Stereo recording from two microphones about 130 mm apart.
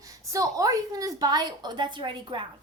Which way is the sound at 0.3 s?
25° right (ahead or behind).